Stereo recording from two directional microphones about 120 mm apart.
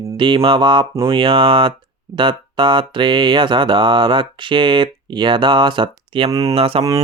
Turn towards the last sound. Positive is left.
turn(degrees=-50)  # may be behind; listen again after turning